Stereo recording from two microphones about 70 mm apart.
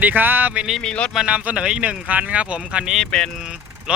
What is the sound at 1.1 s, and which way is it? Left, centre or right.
Speech, centre.